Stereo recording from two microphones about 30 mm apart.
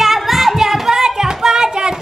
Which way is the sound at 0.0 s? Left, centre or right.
Centre.